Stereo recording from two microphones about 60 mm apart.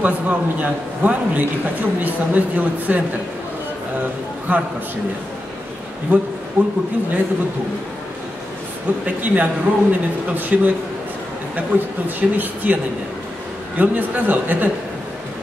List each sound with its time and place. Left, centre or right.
0.0 s a man's voice: right
4.5 s a man's voice: right
6.6 s a man's voice: right
9.0 s a man's voice: right
11.7 s a man's voice: right
12.2 s a man's voice: centre